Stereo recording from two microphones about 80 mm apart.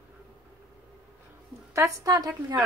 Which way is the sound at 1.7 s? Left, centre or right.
Right.